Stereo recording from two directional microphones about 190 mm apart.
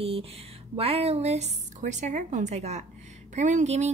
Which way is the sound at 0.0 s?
30° right (ahead or behind).